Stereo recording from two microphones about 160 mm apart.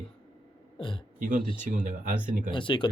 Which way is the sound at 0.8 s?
30° left (ahead or behind).